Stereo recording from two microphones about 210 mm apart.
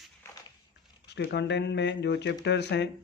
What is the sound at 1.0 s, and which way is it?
Speech, 55° left (ahead or behind).